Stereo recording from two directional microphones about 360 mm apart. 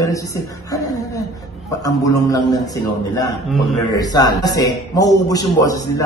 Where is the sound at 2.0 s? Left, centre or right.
Centre.